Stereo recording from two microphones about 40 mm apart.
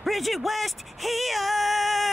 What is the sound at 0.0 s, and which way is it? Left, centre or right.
Speech, centre.